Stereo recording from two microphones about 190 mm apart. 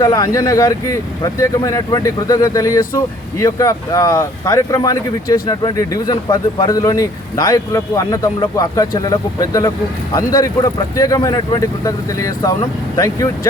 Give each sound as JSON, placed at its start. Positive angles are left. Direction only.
{"t": 0.0, "sound": "speech", "side_deg": 20}